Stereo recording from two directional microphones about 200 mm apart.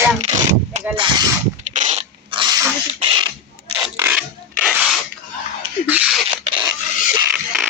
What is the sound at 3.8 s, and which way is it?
Filing, 5° right (ahead or behind).